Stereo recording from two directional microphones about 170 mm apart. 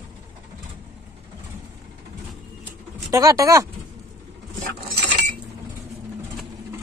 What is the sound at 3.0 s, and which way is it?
Speech, 20° right (ahead or behind).